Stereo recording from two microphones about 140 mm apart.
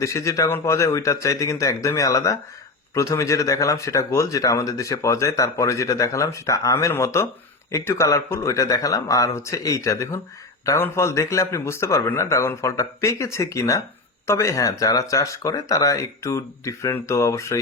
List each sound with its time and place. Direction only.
0.0 s speech: 20° left (ahead or behind)